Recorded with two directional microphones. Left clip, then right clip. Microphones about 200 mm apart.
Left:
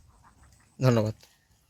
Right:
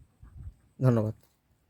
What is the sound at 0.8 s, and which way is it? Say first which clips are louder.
Speech: left 3 dB; 15° right (ahead or behind).